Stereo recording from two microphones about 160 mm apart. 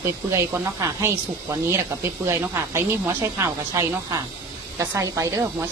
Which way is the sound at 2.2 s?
20° right (ahead or behind).